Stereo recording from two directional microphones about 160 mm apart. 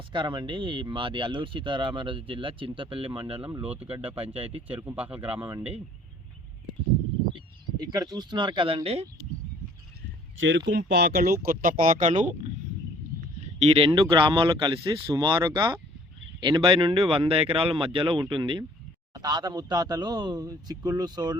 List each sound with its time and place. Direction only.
0.1 s speech: 30° right (ahead or behind)
4.8 s speech: 10° right (ahead or behind)
7.3 s a sound: 30° right (ahead or behind)
8.1 s speech: 25° right (ahead or behind)
10.7 s speech: 90° right; by 12.3 s 50° right (ahead or behind)
13.6 s speech: 35° right (ahead or behind)